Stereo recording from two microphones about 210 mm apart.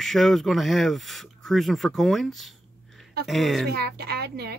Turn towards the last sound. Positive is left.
turn(degrees=-50)  # may be behind; listen again after turning